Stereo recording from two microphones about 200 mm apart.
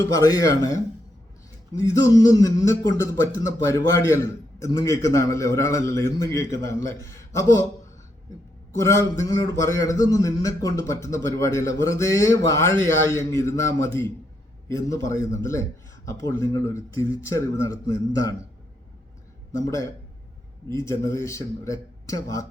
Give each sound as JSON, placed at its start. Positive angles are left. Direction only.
{"t": 0.1, "sound": "a man's voice", "side_deg": 15}
{"t": 8.8, "sound": "a man's voice", "side_deg": 15}
{"t": 19.5, "sound": "a man's voice", "side_deg": 15}